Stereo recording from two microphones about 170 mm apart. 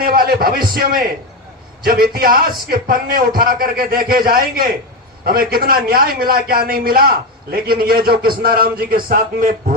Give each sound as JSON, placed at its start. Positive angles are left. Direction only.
{"t": 0.0, "sound": "a man's voice", "side_deg": -60}
{"t": 9.0, "sound": "a man's voice", "side_deg": -50}